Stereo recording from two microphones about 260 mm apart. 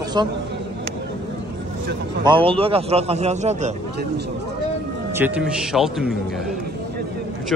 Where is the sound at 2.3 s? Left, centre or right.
Right.